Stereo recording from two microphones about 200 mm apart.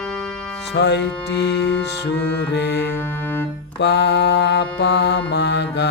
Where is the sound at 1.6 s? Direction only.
5° left (ahead or behind).